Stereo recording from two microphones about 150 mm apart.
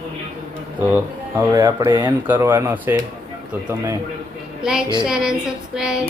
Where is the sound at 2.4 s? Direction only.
15° right (ahead or behind).